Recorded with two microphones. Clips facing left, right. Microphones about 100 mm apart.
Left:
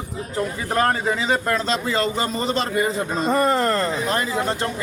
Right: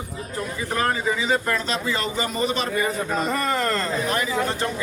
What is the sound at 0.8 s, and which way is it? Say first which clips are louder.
A man's voice: left 3 dB; 40° left (ahead or behind).